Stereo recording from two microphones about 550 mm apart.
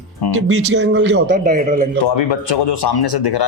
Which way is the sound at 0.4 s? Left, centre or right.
Centre.